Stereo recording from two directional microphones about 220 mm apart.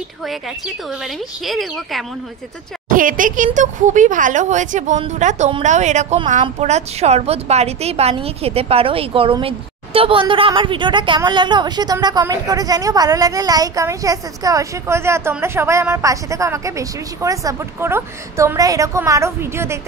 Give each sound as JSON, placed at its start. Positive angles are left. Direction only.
{"t": 1.4, "sound": "speech", "side_deg": 0}
{"t": 2.9, "sound": "a woman's voice", "side_deg": -40}